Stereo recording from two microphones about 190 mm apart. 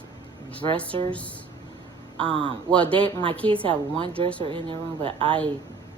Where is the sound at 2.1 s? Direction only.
25° right (ahead or behind).